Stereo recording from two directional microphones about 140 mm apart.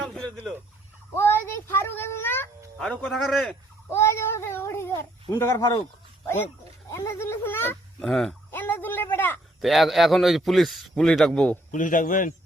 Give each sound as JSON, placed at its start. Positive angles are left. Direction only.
{"t": 0.0, "sound": "fowl", "side_deg": 0}
{"t": 1.1, "sound": "a child's voice", "side_deg": 15}
{"t": 3.8, "sound": "speech", "side_deg": 20}
{"t": 6.9, "sound": "speech", "side_deg": 20}
{"t": 8.0, "sound": "a man's voice", "side_deg": 0}
{"t": 8.4, "sound": "speech", "side_deg": 15}
{"t": 9.6, "sound": "a man's voice", "side_deg": 0}
{"t": 11.7, "sound": "speech", "side_deg": 70}